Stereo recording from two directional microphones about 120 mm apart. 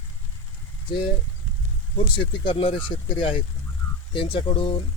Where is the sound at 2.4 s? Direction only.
45° left (ahead or behind).